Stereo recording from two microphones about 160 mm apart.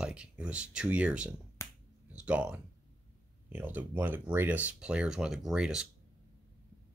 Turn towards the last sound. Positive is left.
turn(degrees=-5)  # may be behind; listen again after turning